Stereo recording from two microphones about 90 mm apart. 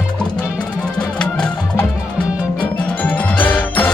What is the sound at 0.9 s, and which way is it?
Music, 10° left (ahead or behind).